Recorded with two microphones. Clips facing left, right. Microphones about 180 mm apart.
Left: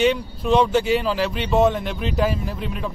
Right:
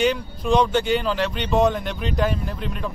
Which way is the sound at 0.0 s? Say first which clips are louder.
Left 2 dB; centre (ahead or behind).